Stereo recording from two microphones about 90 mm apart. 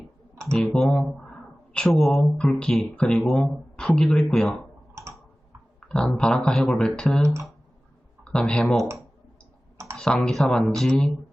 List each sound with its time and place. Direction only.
0.5 s speech: 10° left (ahead or behind)
5.8 s a sound: 10° left (ahead or behind)
6.1 s speech: 10° left (ahead or behind)
9.7 s computer keyboard: 35° right (ahead or behind)
10.2 s speech: 5° left (ahead or behind)